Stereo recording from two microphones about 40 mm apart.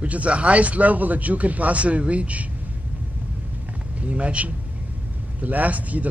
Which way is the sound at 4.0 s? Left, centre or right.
Right.